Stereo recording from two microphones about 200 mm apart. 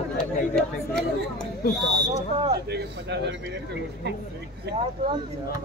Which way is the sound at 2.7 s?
55° right (ahead or behind).